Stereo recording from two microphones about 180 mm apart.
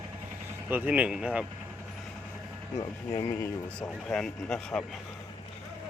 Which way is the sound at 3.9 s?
5° left (ahead or behind).